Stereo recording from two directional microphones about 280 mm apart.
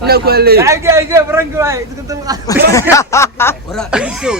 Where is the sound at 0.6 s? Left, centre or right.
Centre.